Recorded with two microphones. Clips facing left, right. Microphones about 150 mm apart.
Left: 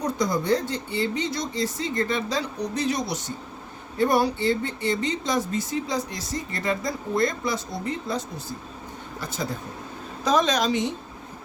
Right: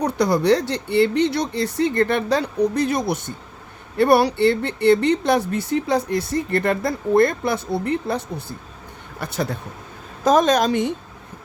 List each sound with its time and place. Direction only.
0.0 s speech: 70° right (ahead or behind); by 3.3 s 55° right (ahead or behind)
3.9 s speech: 70° right (ahead or behind)
10.2 s a woman's voice: 50° right (ahead or behind)